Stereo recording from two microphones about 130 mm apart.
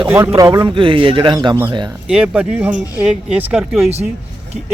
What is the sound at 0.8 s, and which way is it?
Speech, 40° right (ahead or behind).